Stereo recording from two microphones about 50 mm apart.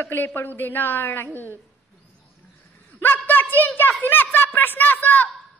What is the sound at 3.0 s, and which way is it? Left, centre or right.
A woman's voice, left.